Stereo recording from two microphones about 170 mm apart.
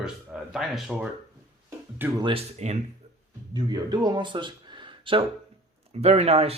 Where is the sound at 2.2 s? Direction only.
35° right (ahead or behind).